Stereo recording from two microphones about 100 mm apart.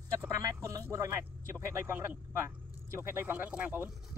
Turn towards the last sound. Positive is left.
turn(degrees=-15)  # may be behind; listen again after turning